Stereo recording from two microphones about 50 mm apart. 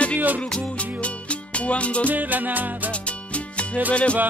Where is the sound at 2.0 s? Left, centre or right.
Right.